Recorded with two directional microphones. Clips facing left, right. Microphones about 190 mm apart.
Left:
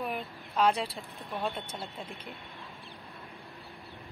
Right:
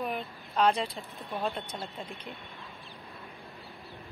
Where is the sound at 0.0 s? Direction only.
Centre (ahead or behind).